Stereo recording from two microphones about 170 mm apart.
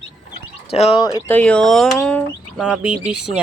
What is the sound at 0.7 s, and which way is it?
Speech, 35° left (ahead or behind).